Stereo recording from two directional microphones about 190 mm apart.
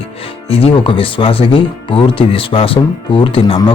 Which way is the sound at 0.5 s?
30° left (ahead or behind).